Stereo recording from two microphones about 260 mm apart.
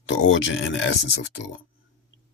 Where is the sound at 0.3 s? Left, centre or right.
Left.